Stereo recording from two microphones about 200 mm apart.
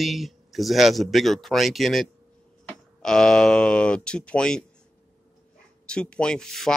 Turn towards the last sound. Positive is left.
turn(degrees=0)  # may be behind; listen again after turning